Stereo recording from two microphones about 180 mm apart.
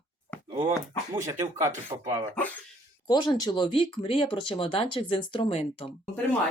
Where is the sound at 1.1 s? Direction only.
20° right (ahead or behind).